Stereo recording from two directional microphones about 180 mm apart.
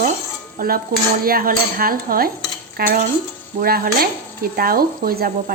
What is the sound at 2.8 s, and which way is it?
Speech, 55° right (ahead or behind).